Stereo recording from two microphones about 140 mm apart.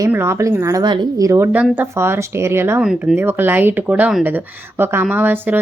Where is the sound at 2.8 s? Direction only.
5° right (ahead or behind).